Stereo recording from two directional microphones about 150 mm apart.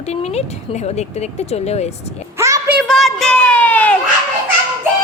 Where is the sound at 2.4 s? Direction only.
20° right (ahead or behind).